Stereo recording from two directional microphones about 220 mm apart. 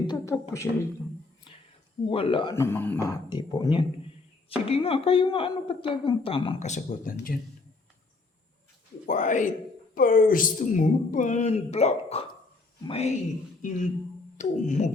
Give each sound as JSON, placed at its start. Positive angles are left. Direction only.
{"t": 0.1, "sound": "a woman's voice", "side_deg": 15}
{"t": 1.5, "sound": "a sound", "side_deg": 25}
{"t": 2.0, "sound": "speech", "side_deg": 25}
{"t": 9.0, "sound": "a man's voice", "side_deg": 35}